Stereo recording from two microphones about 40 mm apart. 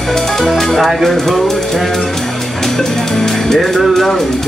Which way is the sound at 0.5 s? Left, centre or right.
Centre.